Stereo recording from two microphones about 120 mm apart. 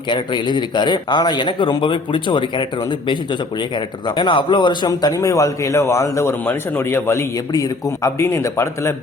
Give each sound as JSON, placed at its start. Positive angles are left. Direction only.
{"t": 0.1, "sound": "speech", "side_deg": 40}
{"t": 3.8, "sound": "a man's voice", "side_deg": 40}